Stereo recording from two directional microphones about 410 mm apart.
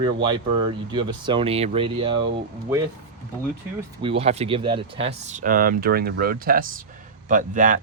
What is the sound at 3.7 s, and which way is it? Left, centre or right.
A man's voice, centre.